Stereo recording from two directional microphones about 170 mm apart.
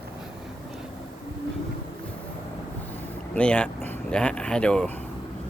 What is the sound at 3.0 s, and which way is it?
Speech, 10° left (ahead or behind).